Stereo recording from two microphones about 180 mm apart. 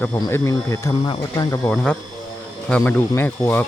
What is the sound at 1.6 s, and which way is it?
Speech, 5° left (ahead or behind).